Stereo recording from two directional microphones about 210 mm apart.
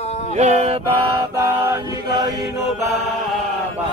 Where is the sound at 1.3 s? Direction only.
15° right (ahead or behind).